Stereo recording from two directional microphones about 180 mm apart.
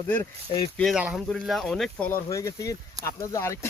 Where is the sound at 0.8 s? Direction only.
Centre (ahead or behind).